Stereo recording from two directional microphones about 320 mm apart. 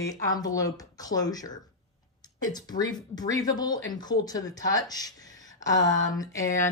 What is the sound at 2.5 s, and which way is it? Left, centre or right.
Speech, centre.